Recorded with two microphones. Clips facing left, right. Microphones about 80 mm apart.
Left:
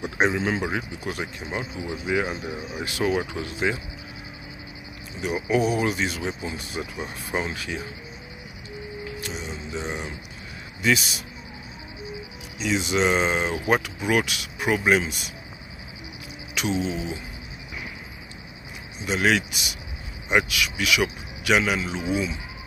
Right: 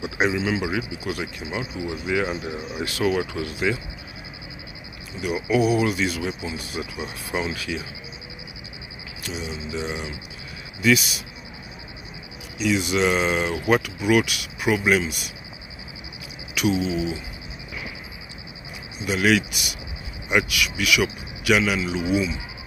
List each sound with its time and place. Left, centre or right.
0.0 s speech: left
2.5 s speech: centre
2.8 s speech: left
5.2 s speech: left
9.2 s speech: left
12.5 s speech: left
16.6 s a sound: left
19.0 s speech: left